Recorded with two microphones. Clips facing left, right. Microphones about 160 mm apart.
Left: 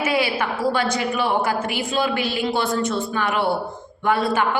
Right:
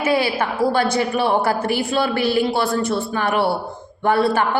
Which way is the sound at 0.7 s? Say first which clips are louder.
Right 3 dB; 35° right (ahead or behind).